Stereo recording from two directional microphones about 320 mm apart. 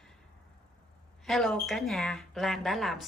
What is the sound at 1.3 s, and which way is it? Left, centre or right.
Speech, centre.